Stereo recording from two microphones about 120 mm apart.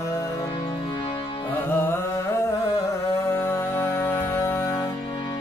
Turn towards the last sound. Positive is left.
turn(degrees=20)  # may be behind; listen again after turning